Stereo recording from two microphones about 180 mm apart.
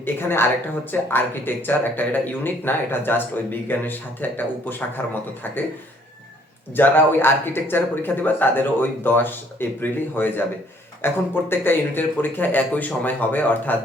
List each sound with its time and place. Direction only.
0.0 s speech: 10° left (ahead or behind)
6.7 s speech: 10° left (ahead or behind)